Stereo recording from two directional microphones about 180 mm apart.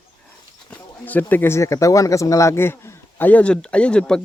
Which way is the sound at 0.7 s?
10° left (ahead or behind).